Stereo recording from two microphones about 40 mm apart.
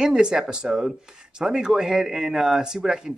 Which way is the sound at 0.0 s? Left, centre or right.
Centre.